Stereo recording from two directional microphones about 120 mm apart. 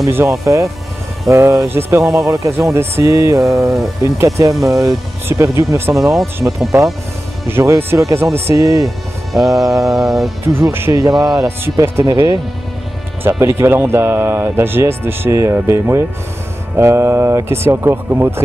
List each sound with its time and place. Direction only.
0.0 s speech: 25° right (ahead or behind)
7.4 s speech: 20° right (ahead or behind)
9.3 s music: centre (ahead or behind)
10.6 s speech: 20° right (ahead or behind)